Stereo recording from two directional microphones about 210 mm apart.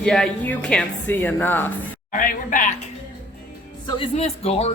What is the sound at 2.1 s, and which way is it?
Speech, 40° left (ahead or behind).